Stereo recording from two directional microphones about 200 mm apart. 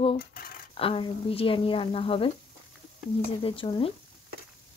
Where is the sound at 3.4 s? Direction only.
25° left (ahead or behind).